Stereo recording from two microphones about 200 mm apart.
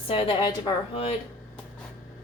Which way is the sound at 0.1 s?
25° left (ahead or behind).